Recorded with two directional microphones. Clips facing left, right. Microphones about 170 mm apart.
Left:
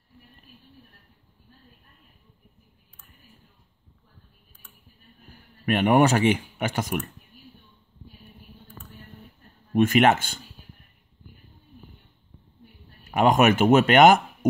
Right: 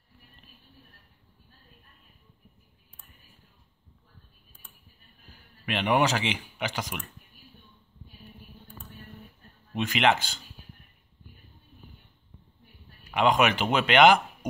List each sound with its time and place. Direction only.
5.7 s speech: 50° left (ahead or behind)
9.8 s speech: 50° left (ahead or behind)
13.1 s speech: 45° left (ahead or behind)